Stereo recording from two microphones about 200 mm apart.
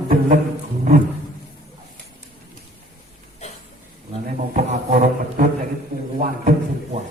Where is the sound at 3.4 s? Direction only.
35° left (ahead or behind).